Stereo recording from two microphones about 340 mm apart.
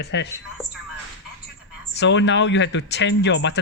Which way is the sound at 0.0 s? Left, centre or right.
Left.